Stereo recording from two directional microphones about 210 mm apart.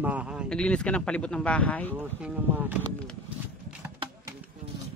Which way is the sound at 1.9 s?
10° right (ahead or behind).